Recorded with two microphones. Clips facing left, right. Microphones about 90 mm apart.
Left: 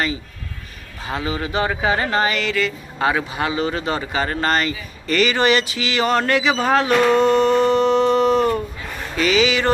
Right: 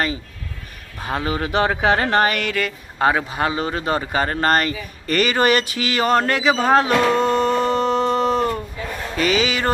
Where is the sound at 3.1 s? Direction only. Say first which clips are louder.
Right 1 dB; 40° right (ahead or behind).